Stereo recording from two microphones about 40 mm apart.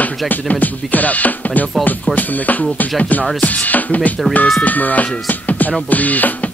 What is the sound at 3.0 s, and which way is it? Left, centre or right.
Speech, left.